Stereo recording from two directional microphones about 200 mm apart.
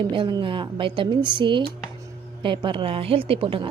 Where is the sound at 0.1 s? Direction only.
25° right (ahead or behind).